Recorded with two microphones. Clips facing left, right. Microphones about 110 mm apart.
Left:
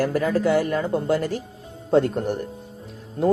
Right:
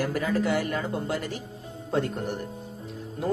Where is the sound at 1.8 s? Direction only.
35° left (ahead or behind).